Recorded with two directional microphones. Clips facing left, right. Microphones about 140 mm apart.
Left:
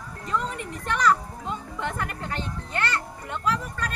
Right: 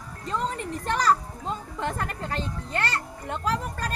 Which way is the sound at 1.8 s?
35° right (ahead or behind).